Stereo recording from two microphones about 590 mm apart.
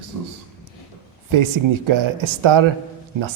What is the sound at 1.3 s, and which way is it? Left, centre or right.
A man's voice, right.